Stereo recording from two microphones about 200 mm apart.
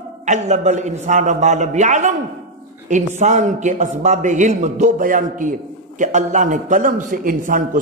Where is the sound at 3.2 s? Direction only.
35° right (ahead or behind).